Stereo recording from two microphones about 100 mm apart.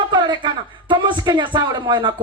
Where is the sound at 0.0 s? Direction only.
50° right (ahead or behind).